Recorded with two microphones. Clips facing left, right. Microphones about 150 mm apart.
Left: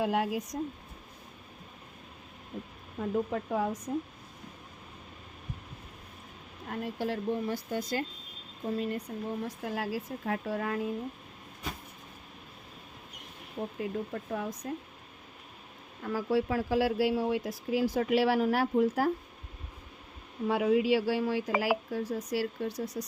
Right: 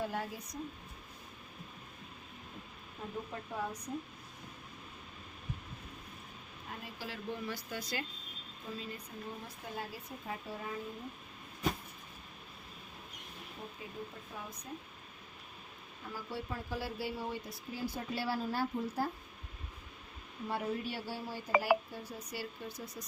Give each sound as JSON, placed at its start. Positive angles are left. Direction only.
{"t": 0.0, "sound": "speech", "side_deg": 90}
{"t": 3.3, "sound": "speech", "side_deg": 90}
{"t": 6.7, "sound": "speech", "side_deg": 60}
{"t": 8.6, "sound": "speech", "side_deg": 60}
{"t": 13.7, "sound": "speech", "side_deg": 75}
{"t": 16.0, "sound": "speech", "side_deg": 90}
{"t": 20.5, "sound": "speech", "side_deg": 90}